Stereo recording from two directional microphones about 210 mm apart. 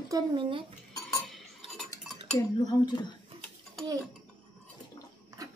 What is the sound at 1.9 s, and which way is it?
Dishes, 15° left (ahead or behind).